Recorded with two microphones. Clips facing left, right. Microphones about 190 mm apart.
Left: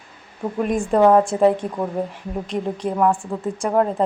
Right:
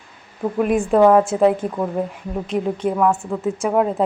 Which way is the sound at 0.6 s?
5° right (ahead or behind).